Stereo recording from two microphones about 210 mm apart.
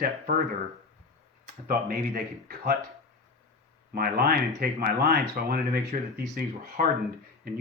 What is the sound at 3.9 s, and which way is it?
Speech, 45° right (ahead or behind).